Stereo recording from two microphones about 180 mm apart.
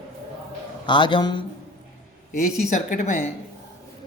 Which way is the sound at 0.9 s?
25° left (ahead or behind).